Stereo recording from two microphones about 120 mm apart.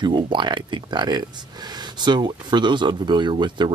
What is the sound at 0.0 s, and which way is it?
Speech, 40° right (ahead or behind).